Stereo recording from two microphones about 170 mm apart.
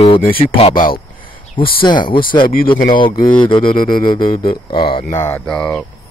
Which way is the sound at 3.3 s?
30° left (ahead or behind).